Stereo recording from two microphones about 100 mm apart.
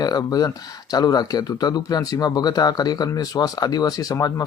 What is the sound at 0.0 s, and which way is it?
Speech, 40° left (ahead or behind).